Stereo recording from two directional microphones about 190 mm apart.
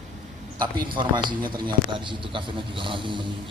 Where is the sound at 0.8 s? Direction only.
25° right (ahead or behind).